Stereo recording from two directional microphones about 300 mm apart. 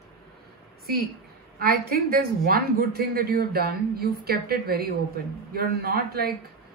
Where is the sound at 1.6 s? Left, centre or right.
Right.